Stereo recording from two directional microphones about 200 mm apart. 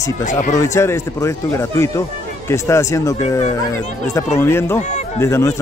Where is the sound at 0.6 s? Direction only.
15° left (ahead or behind).